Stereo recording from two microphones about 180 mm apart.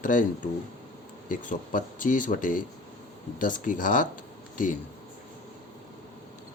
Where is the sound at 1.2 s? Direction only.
45° left (ahead or behind).